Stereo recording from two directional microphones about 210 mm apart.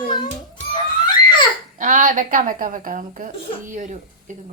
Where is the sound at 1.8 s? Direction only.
40° right (ahead or behind).